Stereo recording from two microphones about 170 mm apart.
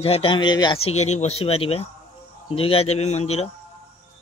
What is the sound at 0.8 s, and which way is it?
A man's voice, 40° left (ahead or behind).